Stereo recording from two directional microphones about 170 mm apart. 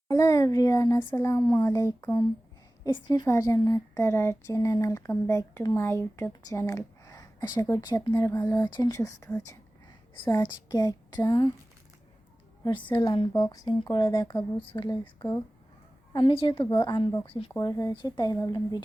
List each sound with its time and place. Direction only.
0.1 s a woman's voice: 20° left (ahead or behind)
12.6 s a woman's voice: 25° left (ahead or behind)
16.1 s a woman's voice: 30° left (ahead or behind)
17.6 s a woman's voice: 20° left (ahead or behind)